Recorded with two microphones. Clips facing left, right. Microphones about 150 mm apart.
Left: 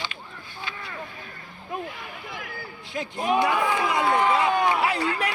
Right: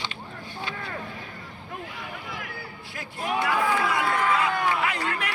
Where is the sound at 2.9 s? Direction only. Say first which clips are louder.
Left 5 dB; 20° left (ahead or behind).